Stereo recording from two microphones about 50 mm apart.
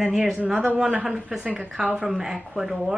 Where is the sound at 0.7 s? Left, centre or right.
Centre.